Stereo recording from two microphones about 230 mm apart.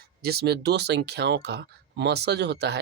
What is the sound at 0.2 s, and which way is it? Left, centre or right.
Speech, right.